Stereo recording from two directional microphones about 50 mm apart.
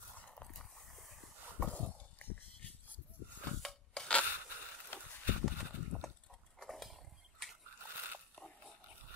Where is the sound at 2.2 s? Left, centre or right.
Left.